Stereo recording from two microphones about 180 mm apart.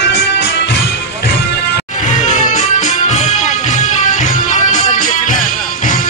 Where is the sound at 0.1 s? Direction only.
70° left (ahead or behind).